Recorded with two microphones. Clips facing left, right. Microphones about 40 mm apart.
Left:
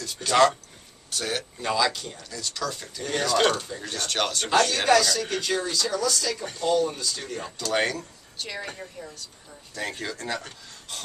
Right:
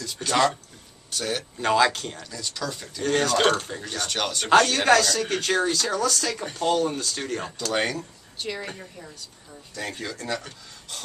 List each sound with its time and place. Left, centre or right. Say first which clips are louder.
0.2 s speech: left 1 dB; right
1.1 s speech: right 1 dB; centre
1.6 s speech: right 5 dB; right
2.1 s speech: even; centre
3.0 s speech: right 2 dB; right
3.8 s speech: even; centre
4.5 s speech: right 4 dB; right
5.1 s speech: right 2 dB; right
5.4 s speech: right 3 dB; right
7.7 s speech: left 1 dB; centre